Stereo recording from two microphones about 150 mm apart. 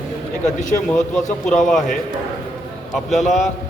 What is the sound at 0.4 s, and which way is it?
Speech, 60° left (ahead or behind).